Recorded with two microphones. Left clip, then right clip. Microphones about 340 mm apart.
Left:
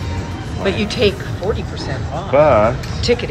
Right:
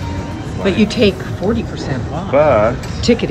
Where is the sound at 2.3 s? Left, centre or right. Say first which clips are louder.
Even; left.